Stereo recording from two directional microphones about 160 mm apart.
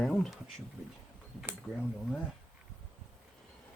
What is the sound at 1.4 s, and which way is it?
Speech, 5° right (ahead or behind).